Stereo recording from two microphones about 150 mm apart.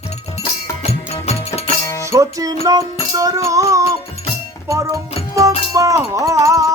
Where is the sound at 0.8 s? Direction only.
45° left (ahead or behind).